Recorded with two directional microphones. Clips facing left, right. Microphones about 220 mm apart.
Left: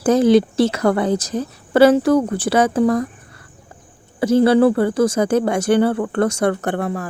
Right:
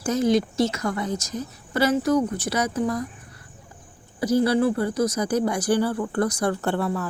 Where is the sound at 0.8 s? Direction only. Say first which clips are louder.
Left 10 dB; 65° left (ahead or behind).